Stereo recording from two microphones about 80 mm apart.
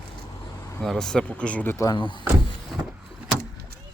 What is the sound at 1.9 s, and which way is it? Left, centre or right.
Speech, left.